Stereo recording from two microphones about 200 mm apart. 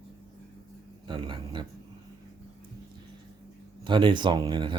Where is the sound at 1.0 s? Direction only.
25° right (ahead or behind).